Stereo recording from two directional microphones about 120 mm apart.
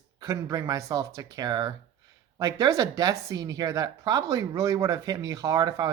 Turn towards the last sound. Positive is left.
turn(degrees=-35)  # may be behind; listen again after turning